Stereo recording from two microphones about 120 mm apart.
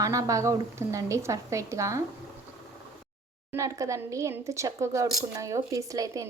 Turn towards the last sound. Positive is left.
turn(degrees=-30)  # may be behind; listen again after turning